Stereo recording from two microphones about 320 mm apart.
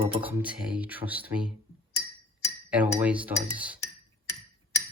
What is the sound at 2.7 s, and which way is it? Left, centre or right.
Cutlery, centre.